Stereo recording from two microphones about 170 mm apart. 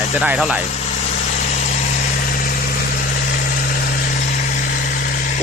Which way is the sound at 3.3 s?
60° left (ahead or behind).